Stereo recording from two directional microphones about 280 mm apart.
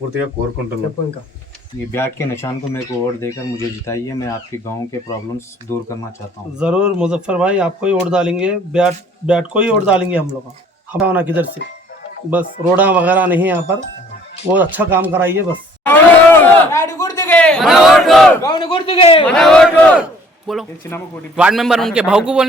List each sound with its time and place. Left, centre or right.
1.9 s speech: centre
3.8 s speech: centre
6.6 s speech: centre
15.9 s a sound: centre
18.4 s a man's voice: centre
19.2 s speech: centre